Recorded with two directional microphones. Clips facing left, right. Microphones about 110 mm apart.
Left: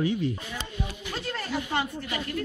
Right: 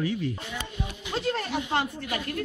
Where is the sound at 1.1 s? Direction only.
30° right (ahead or behind).